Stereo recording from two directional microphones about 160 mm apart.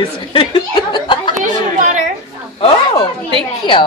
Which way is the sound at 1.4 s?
50° right (ahead or behind).